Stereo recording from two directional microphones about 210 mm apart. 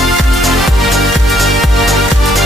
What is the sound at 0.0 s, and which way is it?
Music, centre (ahead or behind).